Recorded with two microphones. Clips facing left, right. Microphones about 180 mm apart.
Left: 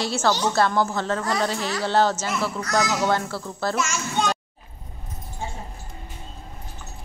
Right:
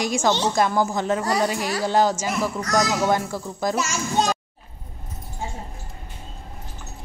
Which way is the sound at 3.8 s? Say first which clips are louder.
Right 2 dB; 35° right (ahead or behind).